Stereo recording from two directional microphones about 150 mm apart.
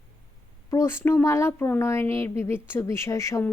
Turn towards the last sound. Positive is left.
turn(degrees=20)  # may be behind; listen again after turning